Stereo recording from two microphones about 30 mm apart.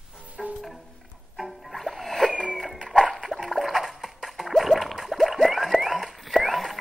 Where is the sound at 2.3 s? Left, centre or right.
Right.